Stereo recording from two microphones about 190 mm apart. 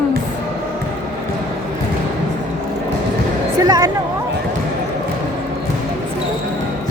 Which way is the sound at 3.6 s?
20° right (ahead or behind).